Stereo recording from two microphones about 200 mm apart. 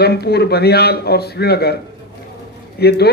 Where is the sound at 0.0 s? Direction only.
55° left (ahead or behind).